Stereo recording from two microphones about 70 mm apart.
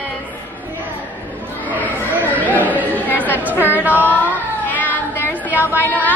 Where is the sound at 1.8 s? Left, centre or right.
Left.